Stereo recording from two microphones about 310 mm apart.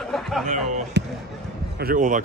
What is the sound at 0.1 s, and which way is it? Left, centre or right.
Music, centre.